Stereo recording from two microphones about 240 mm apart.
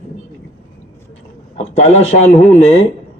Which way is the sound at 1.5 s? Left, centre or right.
Left.